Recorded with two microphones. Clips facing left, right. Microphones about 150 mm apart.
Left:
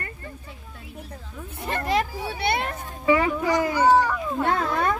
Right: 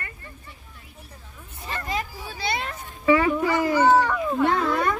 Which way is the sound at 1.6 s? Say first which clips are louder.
Left 6 dB; 60° left (ahead or behind).